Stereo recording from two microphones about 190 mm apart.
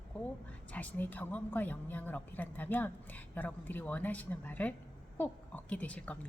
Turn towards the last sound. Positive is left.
turn(degrees=5)  # may be behind; listen again after turning